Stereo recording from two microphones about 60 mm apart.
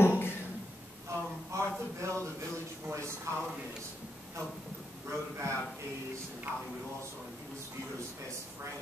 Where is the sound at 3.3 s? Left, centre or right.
Right.